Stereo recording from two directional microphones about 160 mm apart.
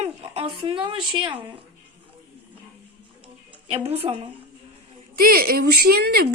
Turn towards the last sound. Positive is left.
turn(degrees=-80)